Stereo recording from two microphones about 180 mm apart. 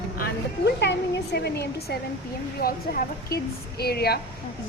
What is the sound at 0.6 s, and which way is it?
A woman's voice, 70° left (ahead or behind).